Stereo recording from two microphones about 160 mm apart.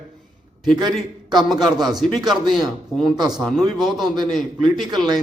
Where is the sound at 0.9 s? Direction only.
Centre (ahead or behind).